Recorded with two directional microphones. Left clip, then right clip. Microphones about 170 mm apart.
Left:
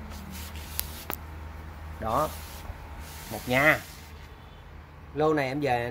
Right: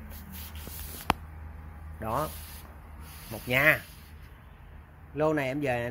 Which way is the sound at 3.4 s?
10° right (ahead or behind).